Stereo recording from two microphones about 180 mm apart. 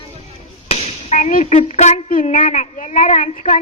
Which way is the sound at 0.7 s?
35° left (ahead or behind).